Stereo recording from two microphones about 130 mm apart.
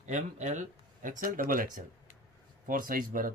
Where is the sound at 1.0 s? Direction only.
90° right.